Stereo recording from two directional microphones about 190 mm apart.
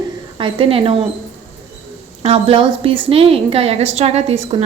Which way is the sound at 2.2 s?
30° right (ahead or behind).